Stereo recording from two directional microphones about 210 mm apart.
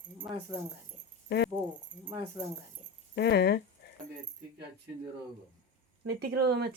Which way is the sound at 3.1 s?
50° left (ahead or behind).